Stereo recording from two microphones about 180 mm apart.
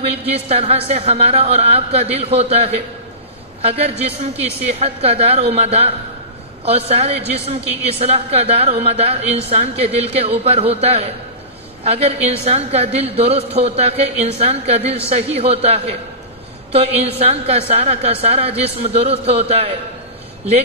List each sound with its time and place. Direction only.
0.0 s a woman's voice: 35° right (ahead or behind)